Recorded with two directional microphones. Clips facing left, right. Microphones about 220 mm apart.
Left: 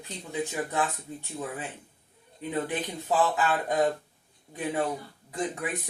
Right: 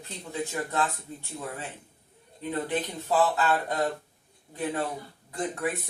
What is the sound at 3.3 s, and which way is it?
Speech, 15° left (ahead or behind).